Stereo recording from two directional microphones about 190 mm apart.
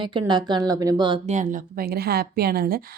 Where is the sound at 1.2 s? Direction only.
40° right (ahead or behind).